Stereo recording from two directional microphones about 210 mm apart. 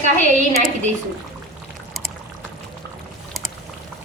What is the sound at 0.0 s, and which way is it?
Speech, 35° right (ahead or behind).